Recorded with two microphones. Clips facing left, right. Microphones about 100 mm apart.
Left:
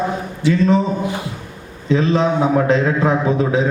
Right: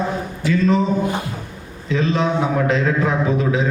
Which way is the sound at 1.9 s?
35° left (ahead or behind).